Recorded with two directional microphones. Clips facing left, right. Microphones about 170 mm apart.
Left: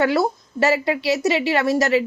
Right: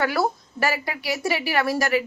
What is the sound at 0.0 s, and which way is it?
Speech, 25° left (ahead or behind).